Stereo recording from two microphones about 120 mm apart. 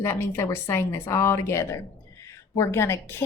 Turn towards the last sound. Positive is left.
turn(degrees=20)  # may be behind; listen again after turning